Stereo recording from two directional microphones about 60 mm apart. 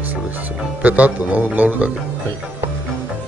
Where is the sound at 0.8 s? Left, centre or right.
Right.